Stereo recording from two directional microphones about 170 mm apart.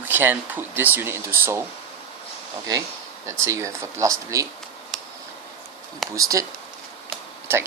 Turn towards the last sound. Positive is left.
turn(degrees=-15)  # may be behind; listen again after turning